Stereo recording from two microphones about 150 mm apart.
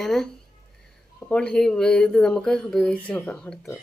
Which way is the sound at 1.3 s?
5° left (ahead or behind).